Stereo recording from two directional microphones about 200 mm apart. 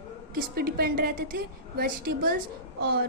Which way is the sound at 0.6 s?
50° right (ahead or behind).